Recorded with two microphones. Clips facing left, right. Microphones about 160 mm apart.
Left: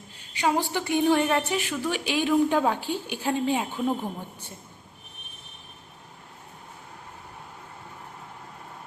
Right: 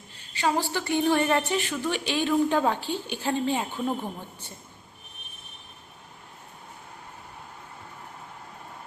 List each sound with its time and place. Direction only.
0.3 s a woman's voice: 15° left (ahead or behind)